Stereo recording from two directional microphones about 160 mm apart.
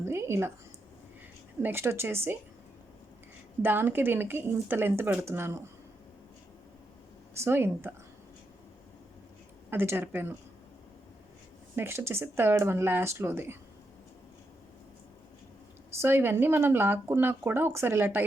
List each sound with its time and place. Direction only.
0.0 s a woman's voice: 15° right (ahead or behind)
1.6 s speech: 15° right (ahead or behind)
3.6 s speech: 10° right (ahead or behind)
7.3 s speech: 15° right (ahead or behind)
9.6 s speech: 15° right (ahead or behind)
11.8 s speech: 15° right (ahead or behind)
16.0 s speech: 15° right (ahead or behind)